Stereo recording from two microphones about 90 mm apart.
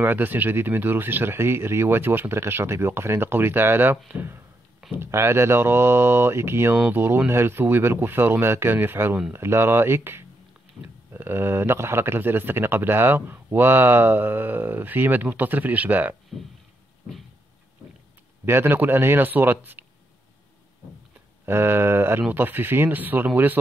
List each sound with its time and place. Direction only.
0.0 s speech: 20° right (ahead or behind)
10.8 s speech: 10° left (ahead or behind)
11.1 s speech: 25° right (ahead or behind)
18.4 s speech: 25° right (ahead or behind)
21.5 s speech: 25° right (ahead or behind)